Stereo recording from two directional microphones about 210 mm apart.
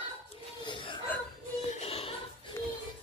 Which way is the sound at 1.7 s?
30° left (ahead or behind).